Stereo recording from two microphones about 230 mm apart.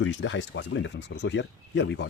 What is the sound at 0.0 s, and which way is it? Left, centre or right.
Speech, left.